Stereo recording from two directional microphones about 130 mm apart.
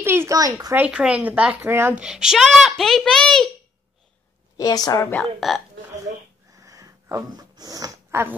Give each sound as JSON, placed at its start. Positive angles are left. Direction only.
{"t": 0.0, "sound": "a child's voice", "side_deg": -20}
{"t": 0.7, "sound": "speech", "side_deg": -10}
{"t": 2.0, "sound": "speech", "side_deg": -5}
{"t": 4.6, "sound": "speech", "side_deg": 30}
{"t": 5.1, "sound": "speech", "side_deg": 0}
{"t": 6.5, "sound": "a sound", "side_deg": -25}